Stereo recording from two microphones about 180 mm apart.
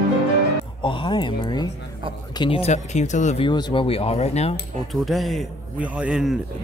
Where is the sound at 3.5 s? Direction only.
25° left (ahead or behind).